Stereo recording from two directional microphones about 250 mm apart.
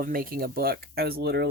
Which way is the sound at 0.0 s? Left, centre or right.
Right.